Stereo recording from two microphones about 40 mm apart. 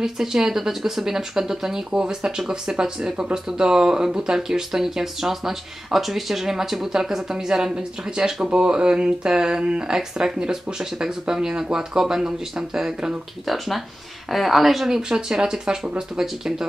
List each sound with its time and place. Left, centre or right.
0.0 s speech: centre
13.5 s speech: centre
14.9 s speech: centre